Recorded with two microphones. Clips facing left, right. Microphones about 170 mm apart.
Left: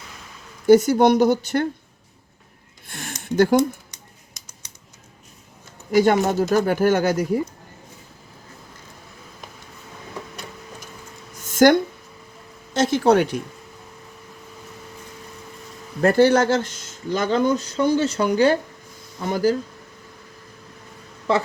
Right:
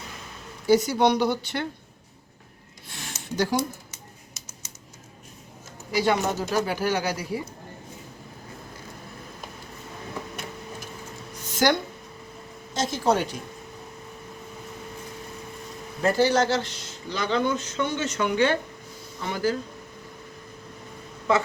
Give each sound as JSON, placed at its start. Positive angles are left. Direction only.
{"t": 0.7, "sound": "speech", "side_deg": 50}
{"t": 2.8, "sound": "a sound", "side_deg": 55}
{"t": 5.9, "sound": "speech", "side_deg": 50}
{"t": 11.4, "sound": "a sound", "side_deg": 50}
{"t": 12.7, "sound": "speech", "side_deg": 65}
{"t": 16.0, "sound": "speech", "side_deg": 55}